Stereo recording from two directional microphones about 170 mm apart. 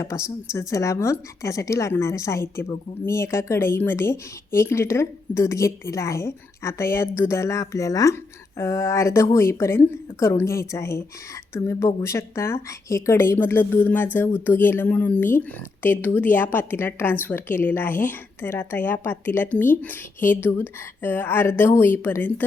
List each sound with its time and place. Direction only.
0.0 s a woman's voice: 15° left (ahead or behind)